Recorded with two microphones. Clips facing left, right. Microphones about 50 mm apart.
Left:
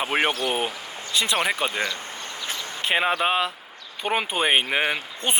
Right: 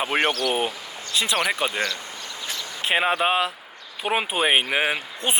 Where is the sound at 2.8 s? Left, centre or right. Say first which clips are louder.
Right 1 dB; centre.